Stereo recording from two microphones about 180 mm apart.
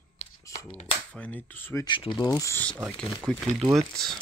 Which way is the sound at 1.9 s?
25° left (ahead or behind).